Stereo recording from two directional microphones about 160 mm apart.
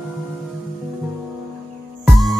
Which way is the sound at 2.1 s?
Centre (ahead or behind).